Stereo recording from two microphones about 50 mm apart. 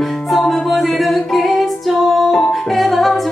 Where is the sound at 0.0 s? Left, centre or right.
Centre.